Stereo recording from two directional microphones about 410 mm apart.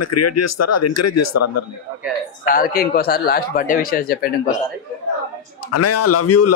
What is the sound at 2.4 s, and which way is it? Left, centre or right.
Speech, left.